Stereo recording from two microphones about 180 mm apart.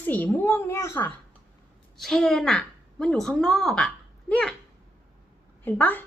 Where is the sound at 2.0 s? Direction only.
5° left (ahead or behind).